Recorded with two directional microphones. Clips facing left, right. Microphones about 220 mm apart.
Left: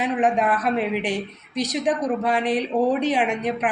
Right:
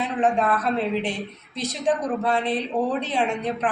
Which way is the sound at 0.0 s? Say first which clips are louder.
Left 1 dB; 15° left (ahead or behind).